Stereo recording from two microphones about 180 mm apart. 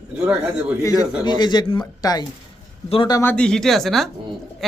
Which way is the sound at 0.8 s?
20° left (ahead or behind).